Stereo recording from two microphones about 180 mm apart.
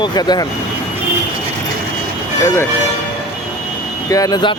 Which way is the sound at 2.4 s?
15° left (ahead or behind).